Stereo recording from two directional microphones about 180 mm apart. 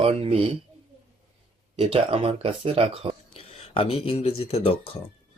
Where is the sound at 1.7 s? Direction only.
35° right (ahead or behind).